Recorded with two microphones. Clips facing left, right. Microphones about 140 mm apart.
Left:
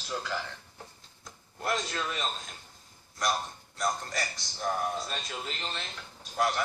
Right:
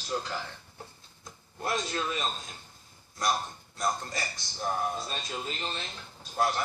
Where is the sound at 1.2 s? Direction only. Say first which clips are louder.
Left 1 dB; 25° right (ahead or behind).